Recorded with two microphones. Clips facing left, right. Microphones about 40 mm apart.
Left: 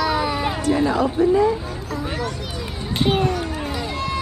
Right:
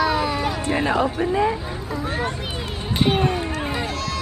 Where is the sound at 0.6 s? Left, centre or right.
Right.